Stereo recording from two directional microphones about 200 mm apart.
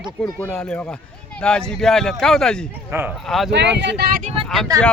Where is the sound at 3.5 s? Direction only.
60° right (ahead or behind).